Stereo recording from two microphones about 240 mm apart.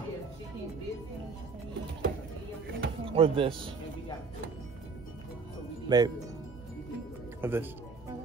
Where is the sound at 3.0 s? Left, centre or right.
Right.